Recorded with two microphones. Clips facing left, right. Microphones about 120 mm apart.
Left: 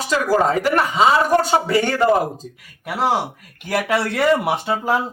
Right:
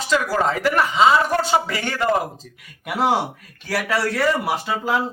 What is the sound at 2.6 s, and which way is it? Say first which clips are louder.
Speech: right 1 dB; centre (ahead or behind).